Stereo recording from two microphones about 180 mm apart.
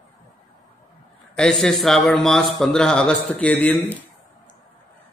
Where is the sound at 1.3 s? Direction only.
5° left (ahead or behind).